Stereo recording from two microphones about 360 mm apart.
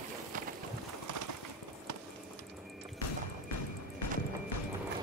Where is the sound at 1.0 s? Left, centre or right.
Right.